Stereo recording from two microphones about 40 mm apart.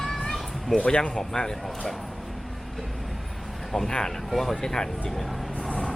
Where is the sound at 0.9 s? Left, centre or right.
Left.